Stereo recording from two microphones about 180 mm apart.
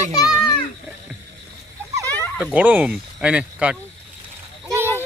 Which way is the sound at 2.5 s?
10° right (ahead or behind).